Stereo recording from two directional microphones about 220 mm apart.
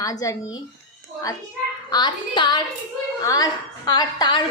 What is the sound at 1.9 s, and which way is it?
A woman's voice, 20° left (ahead or behind).